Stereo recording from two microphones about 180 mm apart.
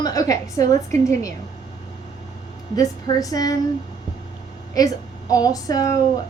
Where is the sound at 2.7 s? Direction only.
20° left (ahead or behind).